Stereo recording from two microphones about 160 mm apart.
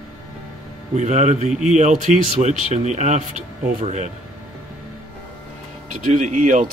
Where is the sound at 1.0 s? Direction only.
45° right (ahead or behind).